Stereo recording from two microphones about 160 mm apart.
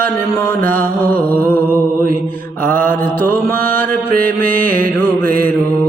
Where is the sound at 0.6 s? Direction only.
60° right (ahead or behind).